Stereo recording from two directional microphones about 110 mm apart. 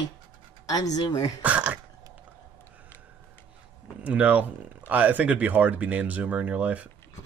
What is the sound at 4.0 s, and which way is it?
Speech, 15° right (ahead or behind).